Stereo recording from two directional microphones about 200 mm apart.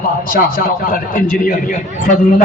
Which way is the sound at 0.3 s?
45° left (ahead or behind).